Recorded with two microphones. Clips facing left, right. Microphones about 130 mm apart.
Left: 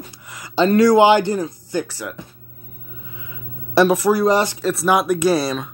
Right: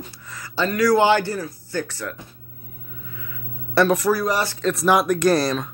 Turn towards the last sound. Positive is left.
turn(degrees=0)  # may be behind; listen again after turning